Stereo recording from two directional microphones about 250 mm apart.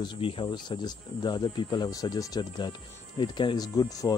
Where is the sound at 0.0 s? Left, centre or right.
Centre.